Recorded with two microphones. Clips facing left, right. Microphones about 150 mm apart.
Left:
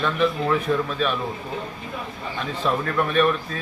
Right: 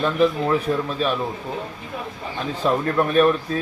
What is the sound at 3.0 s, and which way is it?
Speech, 35° right (ahead or behind).